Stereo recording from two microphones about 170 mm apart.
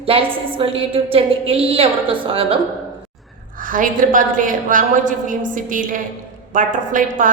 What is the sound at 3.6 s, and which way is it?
A woman's voice, 50° right (ahead or behind).